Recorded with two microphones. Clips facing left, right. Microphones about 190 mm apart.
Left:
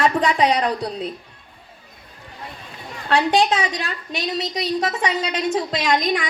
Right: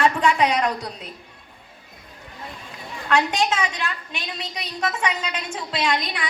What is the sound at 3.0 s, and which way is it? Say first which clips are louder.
A woman's voice: left 4 dB; 35° left (ahead or behind).